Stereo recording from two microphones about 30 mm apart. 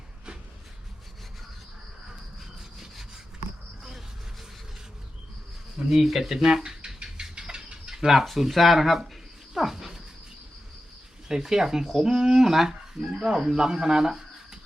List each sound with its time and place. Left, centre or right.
2.6 s wood: centre
5.9 s speech: centre
7.0 s a sound: right
8.0 s speech: centre
9.6 s a sound: centre
11.3 s speech: centre